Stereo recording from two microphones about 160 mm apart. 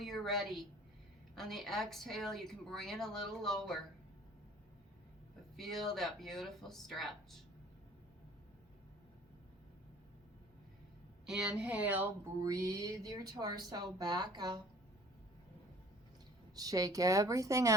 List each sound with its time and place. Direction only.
0.0 s a woman's voice: centre (ahead or behind)
5.5 s speech: centre (ahead or behind)
11.3 s speech: 5° right (ahead or behind)
12.5 s speech: 20° right (ahead or behind)
16.6 s speech: 20° right (ahead or behind)